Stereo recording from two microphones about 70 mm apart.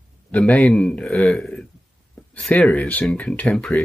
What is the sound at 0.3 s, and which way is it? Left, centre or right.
Speech, centre.